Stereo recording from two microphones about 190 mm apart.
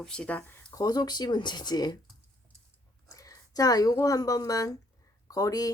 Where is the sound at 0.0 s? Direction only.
5° left (ahead or behind); by 2.0 s 20° left (ahead or behind).